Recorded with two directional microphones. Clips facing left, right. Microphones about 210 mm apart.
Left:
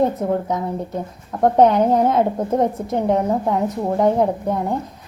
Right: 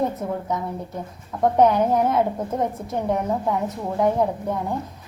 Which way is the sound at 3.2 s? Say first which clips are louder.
Left 4 dB; 35° left (ahead or behind).